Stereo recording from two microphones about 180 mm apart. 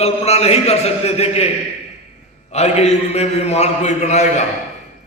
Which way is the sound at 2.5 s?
40° left (ahead or behind).